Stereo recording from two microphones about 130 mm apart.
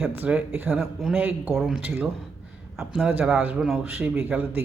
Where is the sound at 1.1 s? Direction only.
10° right (ahead or behind).